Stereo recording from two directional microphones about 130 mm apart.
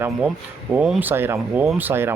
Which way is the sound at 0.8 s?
5° right (ahead or behind).